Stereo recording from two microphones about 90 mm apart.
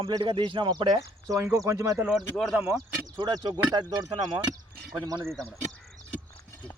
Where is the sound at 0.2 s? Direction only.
70° right (ahead or behind).